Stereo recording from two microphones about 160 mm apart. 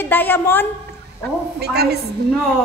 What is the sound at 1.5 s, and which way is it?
Speech, 85° right.